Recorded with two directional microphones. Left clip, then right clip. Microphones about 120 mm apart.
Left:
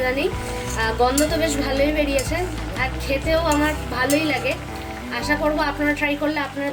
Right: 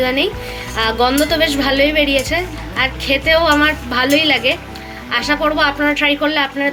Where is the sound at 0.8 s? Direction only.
40° right (ahead or behind).